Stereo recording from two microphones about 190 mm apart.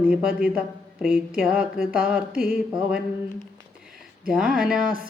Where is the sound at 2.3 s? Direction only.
50° right (ahead or behind).